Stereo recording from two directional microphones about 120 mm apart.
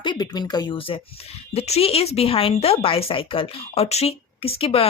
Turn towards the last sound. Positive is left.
turn(degrees=55)  # may be behind; listen again after turning